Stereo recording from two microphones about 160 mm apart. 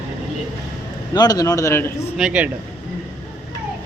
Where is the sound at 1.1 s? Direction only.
25° left (ahead or behind).